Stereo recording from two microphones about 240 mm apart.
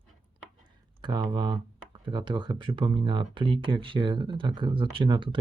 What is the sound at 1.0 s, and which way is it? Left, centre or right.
Speech, centre.